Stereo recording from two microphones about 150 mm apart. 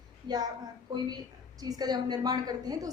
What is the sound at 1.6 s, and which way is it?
A woman's voice, 25° right (ahead or behind).